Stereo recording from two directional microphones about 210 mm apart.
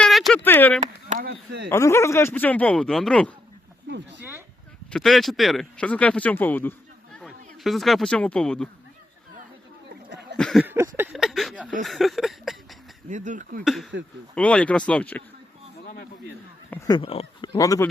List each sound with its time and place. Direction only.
0.0 s a sound: centre (ahead or behind)
1.1 s speech: 50° right (ahead or behind)
1.7 s speech: 15° left (ahead or behind)
4.2 s a sound: 10° right (ahead or behind)
4.9 s speech: centre (ahead or behind)
10.3 s speech: centre (ahead or behind)
13.1 s speech: 35° right (ahead or behind)
13.9 s speech: 60° right (ahead or behind)
14.3 s speech: 5° left (ahead or behind)
16.6 s speech: 10° left (ahead or behind)
17.0 s speech: 25° left (ahead or behind)
17.5 s speech: 15° left (ahead or behind)